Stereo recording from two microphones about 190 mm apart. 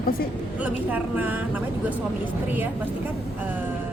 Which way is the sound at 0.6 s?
10° right (ahead or behind).